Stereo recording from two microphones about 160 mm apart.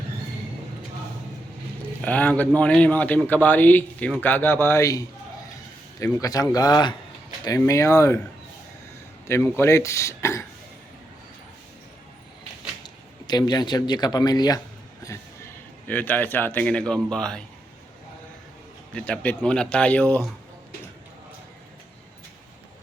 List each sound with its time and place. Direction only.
2.0 s a man's voice: 10° left (ahead or behind)
9.2 s a man's voice: 15° left (ahead or behind)
12.8 s speech: 25° left (ahead or behind)
15.9 s a man's voice: 10° left (ahead or behind)
18.9 s a man's voice: 5° left (ahead or behind)